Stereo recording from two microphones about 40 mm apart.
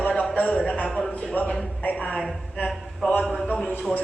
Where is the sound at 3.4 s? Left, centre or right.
Centre.